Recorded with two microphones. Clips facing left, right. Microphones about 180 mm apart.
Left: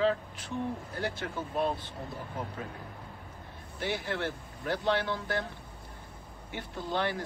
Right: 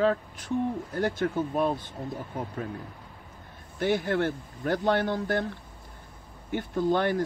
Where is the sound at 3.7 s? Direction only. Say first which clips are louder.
Right 8 dB; 45° right (ahead or behind).